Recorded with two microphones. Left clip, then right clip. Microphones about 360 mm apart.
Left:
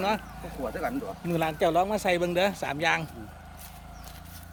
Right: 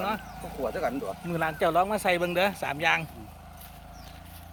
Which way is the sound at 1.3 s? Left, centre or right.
Centre.